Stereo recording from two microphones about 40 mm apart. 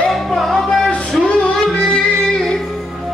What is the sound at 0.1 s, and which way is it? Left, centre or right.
Music, centre.